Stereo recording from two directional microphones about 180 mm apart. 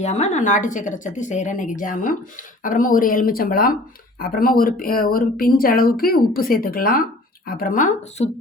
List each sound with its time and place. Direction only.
0.0 s speech: 40° left (ahead or behind)